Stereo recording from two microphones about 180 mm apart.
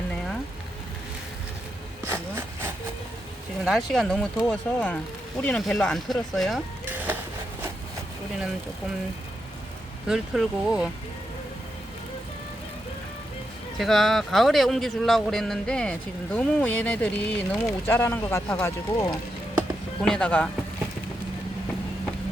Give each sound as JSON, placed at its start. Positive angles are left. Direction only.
{"t": 2.0, "sound": "vehicle", "side_deg": -10}
{"t": 3.6, "sound": "a man's voice", "side_deg": -5}
{"t": 6.8, "sound": "a sound", "side_deg": -10}
{"t": 10.1, "sound": "a man's voice", "side_deg": -5}
{"t": 13.7, "sound": "a man's voice", "side_deg": 0}
{"t": 20.0, "sound": "a man's voice", "side_deg": 5}